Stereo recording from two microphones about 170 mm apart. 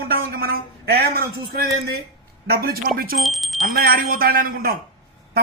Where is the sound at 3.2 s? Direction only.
Centre (ahead or behind).